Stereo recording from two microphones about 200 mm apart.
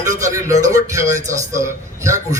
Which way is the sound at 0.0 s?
15° right (ahead or behind).